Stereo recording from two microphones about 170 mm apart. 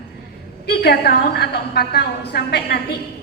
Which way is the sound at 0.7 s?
70° left (ahead or behind).